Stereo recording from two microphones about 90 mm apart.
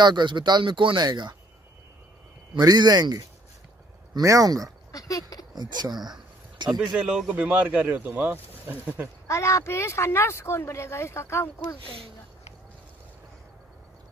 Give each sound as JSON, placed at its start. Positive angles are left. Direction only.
{"t": 0.0, "sound": "speech", "side_deg": -55}
{"t": 2.6, "sound": "speech", "side_deg": -45}
{"t": 4.9, "sound": "speech", "side_deg": 40}
{"t": 5.5, "sound": "a sound", "side_deg": -50}
{"t": 7.0, "sound": "speech", "side_deg": -10}
{"t": 9.3, "sound": "speech", "side_deg": 35}